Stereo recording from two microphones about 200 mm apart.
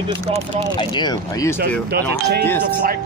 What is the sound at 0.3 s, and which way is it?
Speech, 30° right (ahead or behind).